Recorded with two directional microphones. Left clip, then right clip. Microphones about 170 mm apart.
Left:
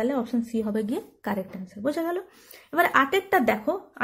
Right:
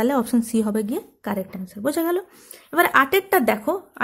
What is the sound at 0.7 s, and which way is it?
A woman's voice, 20° right (ahead or behind).